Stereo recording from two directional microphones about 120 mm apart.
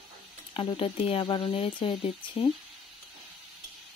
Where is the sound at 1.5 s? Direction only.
50° left (ahead or behind).